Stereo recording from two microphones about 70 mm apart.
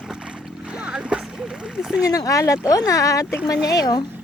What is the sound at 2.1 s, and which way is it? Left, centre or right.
Speech, left.